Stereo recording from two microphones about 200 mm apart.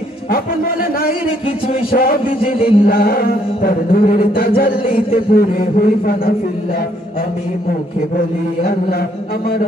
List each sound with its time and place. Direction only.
1.9 s music: 45° left (ahead or behind)
2.2 s music: 30° left (ahead or behind)
2.8 s music: 45° left (ahead or behind)
4.8 s music: 30° left (ahead or behind)
5.3 s music: 50° left (ahead or behind)